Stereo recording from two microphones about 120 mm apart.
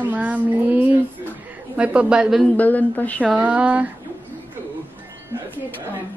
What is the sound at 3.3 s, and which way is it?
Speech, 10° right (ahead or behind).